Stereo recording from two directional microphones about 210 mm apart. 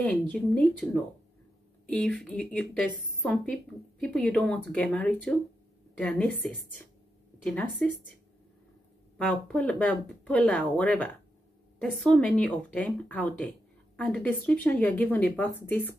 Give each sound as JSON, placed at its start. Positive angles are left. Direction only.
{"t": 0.0, "sound": "a woman's voice", "side_deg": 5}
{"t": 1.9, "sound": "a woman's voice", "side_deg": 5}
{"t": 7.4, "sound": "a woman's voice", "side_deg": 5}
{"t": 9.2, "sound": "speech", "side_deg": 5}